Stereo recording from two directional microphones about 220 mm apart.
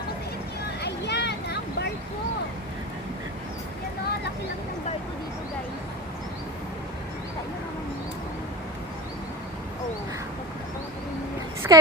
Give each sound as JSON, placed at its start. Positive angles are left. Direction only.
{"t": 0.8, "sound": "vehicle", "side_deg": 50}
{"t": 11.6, "sound": "a woman's voice", "side_deg": -10}